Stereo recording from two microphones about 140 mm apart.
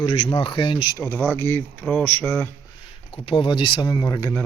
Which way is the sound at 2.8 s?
40° left (ahead or behind).